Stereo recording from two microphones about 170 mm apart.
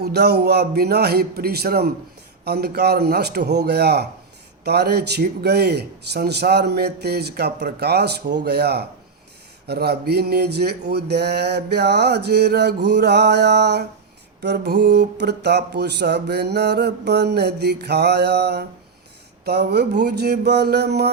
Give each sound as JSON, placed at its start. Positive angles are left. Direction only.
{"t": 0.0, "sound": "a man's voice", "side_deg": -75}